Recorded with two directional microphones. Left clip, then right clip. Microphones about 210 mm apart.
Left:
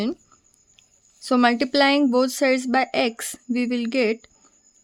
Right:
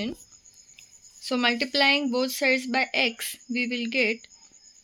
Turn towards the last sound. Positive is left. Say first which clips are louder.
# left 3 dB
turn(degrees=55)  # may be behind; listen again after turning